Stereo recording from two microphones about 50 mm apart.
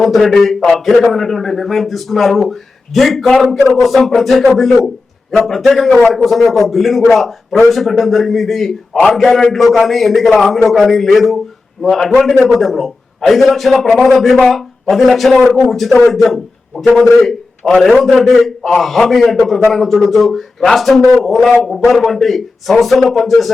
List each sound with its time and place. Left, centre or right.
0.0 s a man's voice: centre